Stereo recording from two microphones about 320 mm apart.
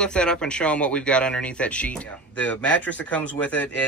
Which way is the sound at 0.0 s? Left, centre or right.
Centre.